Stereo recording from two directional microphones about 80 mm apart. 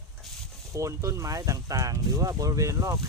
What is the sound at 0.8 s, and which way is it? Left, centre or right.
Speech, right.